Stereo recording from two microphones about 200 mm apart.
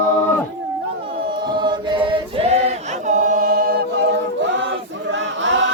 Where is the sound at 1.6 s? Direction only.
25° right (ahead or behind); by 3.8 s 45° right (ahead or behind).